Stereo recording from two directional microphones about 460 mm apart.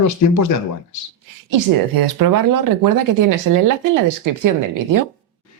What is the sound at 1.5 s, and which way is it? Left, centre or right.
Speech, right.